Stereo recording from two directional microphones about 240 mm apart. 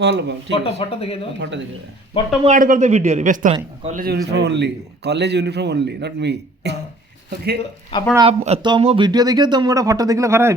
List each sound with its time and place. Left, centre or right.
0.0 s a man's voice: right
0.5 s speech: left
1.4 s a man's voice: right
2.4 s a man's voice: right
4.0 s a man's voice: right
8.1 s speech: right